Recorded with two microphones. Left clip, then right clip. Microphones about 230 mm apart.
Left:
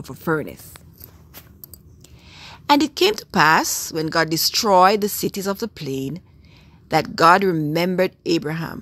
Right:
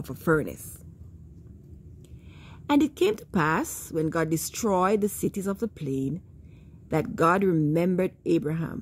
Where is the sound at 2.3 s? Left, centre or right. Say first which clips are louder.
Left 8 dB; centre.